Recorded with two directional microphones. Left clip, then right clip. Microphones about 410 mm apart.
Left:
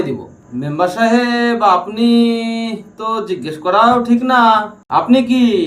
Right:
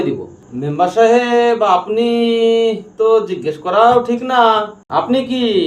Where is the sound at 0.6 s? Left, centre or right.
Centre.